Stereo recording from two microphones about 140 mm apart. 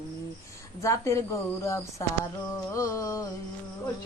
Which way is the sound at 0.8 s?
20° left (ahead or behind).